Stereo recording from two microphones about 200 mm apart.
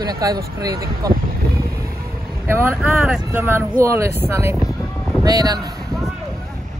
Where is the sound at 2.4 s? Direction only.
10° right (ahead or behind).